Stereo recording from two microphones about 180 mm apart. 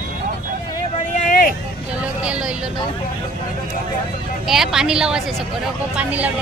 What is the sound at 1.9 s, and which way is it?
Speech, 5° right (ahead or behind).